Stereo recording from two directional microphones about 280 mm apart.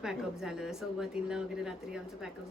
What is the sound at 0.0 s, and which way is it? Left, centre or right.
A woman's voice, centre.